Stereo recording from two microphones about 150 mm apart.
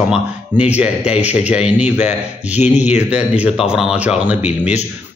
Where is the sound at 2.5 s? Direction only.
50° left (ahead or behind).